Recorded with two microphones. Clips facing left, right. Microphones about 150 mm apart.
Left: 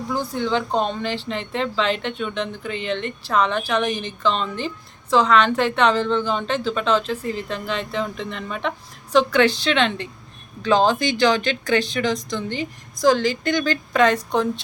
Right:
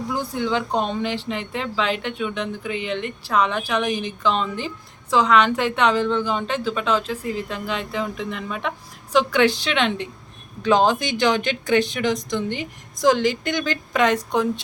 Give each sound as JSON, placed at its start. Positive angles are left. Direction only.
{"t": 0.1, "sound": "speech", "side_deg": -10}